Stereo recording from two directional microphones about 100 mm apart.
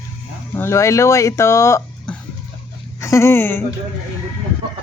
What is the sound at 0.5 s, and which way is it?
Speech, 25° left (ahead or behind).